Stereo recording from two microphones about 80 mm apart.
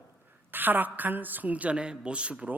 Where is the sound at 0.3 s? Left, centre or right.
Right.